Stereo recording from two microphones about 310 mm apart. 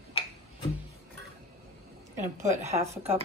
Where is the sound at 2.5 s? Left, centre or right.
Right.